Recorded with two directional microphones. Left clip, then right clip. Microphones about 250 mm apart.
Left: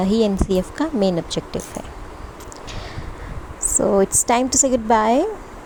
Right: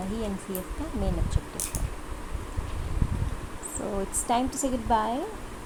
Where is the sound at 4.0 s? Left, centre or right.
Left.